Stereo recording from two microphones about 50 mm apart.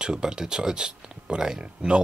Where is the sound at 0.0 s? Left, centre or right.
Centre.